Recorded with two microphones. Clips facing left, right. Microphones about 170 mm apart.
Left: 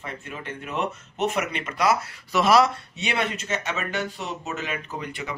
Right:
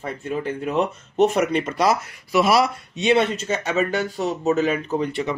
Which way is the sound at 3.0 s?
25° right (ahead or behind).